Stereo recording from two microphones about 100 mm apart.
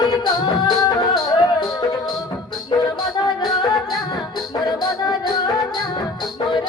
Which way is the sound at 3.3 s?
45° left (ahead or behind).